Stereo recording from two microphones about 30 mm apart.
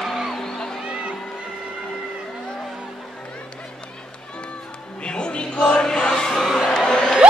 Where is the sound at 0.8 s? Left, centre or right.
Right.